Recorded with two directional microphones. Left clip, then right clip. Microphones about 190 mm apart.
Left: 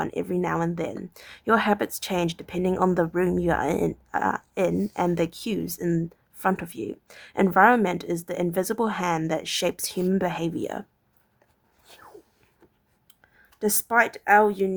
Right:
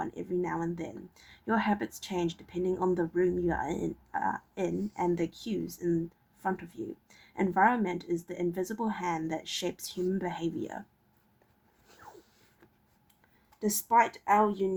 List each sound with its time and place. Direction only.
0.0 s speech: 40° left (ahead or behind)
13.6 s speech: 40° left (ahead or behind)